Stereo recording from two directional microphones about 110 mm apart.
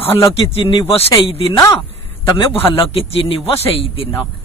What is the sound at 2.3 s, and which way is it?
A man's voice, 55° left (ahead or behind).